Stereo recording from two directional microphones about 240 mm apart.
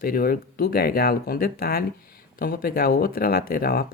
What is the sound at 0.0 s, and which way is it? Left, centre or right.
Speech, left.